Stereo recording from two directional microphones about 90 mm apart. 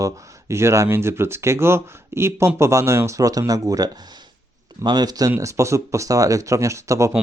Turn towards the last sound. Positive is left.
turn(degrees=-35)  # may be behind; listen again after turning